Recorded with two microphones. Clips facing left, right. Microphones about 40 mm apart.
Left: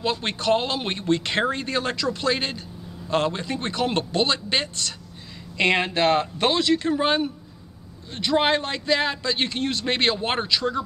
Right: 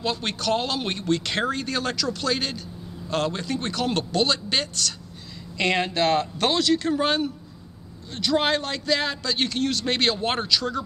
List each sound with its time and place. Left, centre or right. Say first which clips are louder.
0.0 s speech: left 2 dB; left